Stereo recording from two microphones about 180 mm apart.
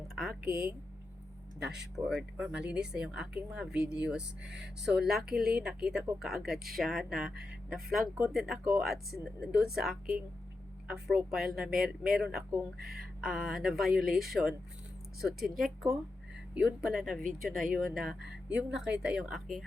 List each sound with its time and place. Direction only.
0.2 s speech: centre (ahead or behind)
2.0 s speech: 5° right (ahead or behind)
4.4 s speech: 70° right (ahead or behind)
4.9 s speech: 5° right (ahead or behind)